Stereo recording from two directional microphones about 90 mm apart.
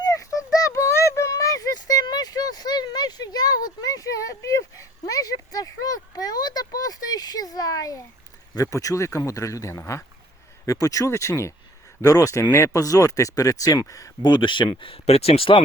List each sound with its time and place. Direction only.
0.0 s a sound: 40° left (ahead or behind)
8.5 s speech: 40° left (ahead or behind)
14.2 s speech: 60° left (ahead or behind); by 15.6 s 85° left